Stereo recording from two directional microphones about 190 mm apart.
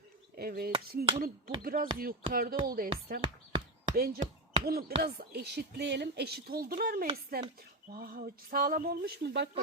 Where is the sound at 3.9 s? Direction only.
50° right (ahead or behind).